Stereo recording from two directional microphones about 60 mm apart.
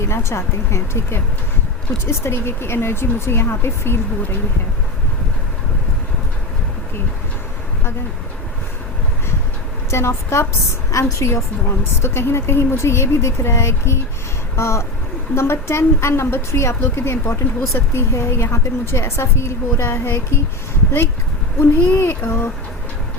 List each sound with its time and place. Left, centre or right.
0.1 s a woman's voice: left
9.9 s a woman's voice: left
21.6 s child singing: left